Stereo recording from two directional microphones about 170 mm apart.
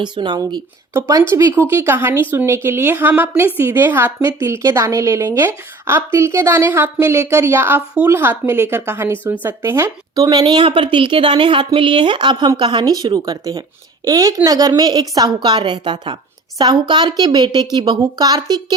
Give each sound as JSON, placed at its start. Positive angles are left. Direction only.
{"t": 0.0, "sound": "a woman's voice", "side_deg": -25}